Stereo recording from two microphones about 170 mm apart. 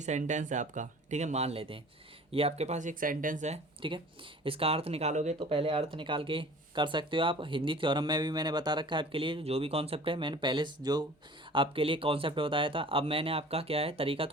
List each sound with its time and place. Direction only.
0.0 s speech: 45° right (ahead or behind)